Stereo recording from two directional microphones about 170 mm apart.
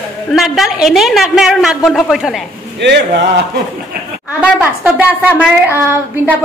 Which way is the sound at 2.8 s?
90° right.